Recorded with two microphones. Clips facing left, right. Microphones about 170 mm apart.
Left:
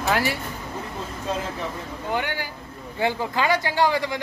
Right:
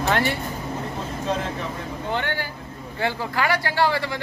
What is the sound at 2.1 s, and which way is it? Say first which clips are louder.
Speech: even; 10° left (ahead or behind).